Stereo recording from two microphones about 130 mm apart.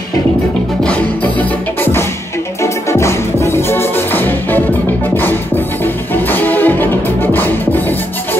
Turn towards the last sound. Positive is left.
turn(degrees=15)  # may be behind; listen again after turning